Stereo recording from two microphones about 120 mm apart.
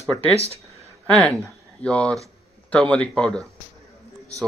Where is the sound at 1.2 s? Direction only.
10° left (ahead or behind).